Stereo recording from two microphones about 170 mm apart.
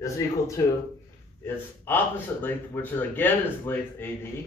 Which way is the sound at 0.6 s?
15° left (ahead or behind).